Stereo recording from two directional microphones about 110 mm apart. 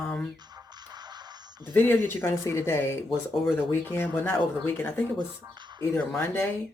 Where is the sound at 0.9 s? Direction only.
40° right (ahead or behind).